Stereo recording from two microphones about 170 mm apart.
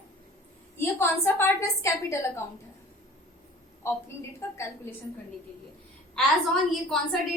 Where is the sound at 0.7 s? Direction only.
15° left (ahead or behind).